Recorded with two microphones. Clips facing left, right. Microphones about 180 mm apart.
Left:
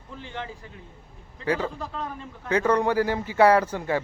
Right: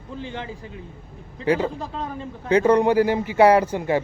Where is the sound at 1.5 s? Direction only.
25° right (ahead or behind).